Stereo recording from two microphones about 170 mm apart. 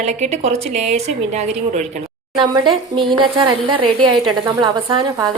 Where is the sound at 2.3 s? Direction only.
30° right (ahead or behind).